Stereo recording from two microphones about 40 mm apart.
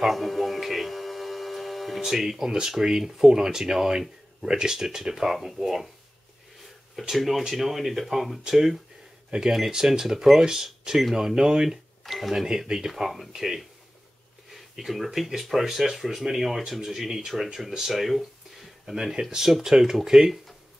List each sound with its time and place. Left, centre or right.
0.0 s a sound: centre
2.0 s speech: centre
7.0 s speech: centre
12.0 s cash register: centre
12.6 s speech: centre